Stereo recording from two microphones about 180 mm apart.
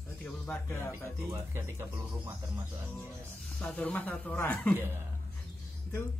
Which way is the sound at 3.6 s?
10° left (ahead or behind).